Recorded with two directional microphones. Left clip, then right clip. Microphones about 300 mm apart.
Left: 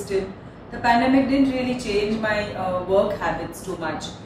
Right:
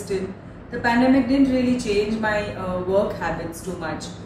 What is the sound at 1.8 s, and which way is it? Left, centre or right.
A woman's voice, centre.